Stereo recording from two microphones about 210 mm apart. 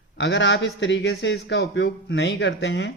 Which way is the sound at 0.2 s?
60° left (ahead or behind).